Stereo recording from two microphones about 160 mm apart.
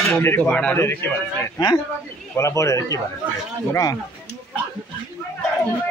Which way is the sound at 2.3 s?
20° left (ahead or behind).